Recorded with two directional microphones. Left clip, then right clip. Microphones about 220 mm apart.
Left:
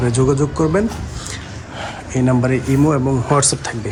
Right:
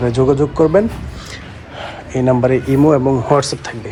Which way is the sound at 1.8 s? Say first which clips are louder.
Right 2 dB; 20° left (ahead or behind).